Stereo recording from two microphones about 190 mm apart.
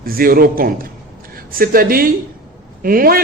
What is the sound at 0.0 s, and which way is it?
A man's voice, 50° right (ahead or behind).